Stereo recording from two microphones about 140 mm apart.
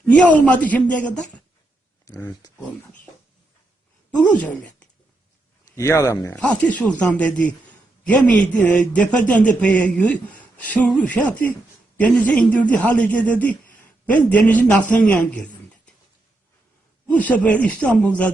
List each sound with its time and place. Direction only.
0.1 s speech: 10° left (ahead or behind)
2.0 s speech: 20° left (ahead or behind)
5.7 s speech: 20° left (ahead or behind)
6.3 s a man's voice: 5° left (ahead or behind)
17.1 s speech: 10° left (ahead or behind)